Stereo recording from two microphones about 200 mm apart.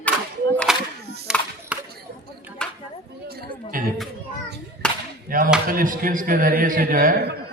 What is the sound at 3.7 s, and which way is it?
Chatter, 45° right (ahead or behind).